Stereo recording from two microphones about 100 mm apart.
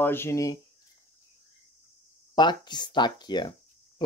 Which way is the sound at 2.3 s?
45° left (ahead or behind).